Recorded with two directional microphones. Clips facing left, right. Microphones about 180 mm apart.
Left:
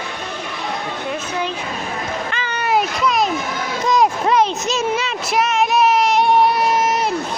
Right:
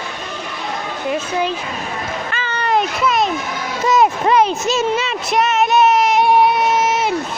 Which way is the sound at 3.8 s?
5° right (ahead or behind).